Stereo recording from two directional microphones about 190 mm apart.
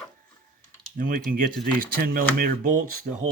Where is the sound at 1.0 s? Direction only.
45° right (ahead or behind).